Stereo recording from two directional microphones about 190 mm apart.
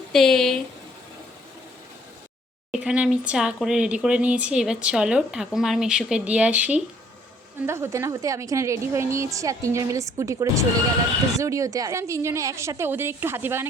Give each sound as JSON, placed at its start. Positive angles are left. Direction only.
{"t": 0.1, "sound": "speech", "side_deg": 0}
{"t": 2.7, "sound": "a woman's voice", "side_deg": -5}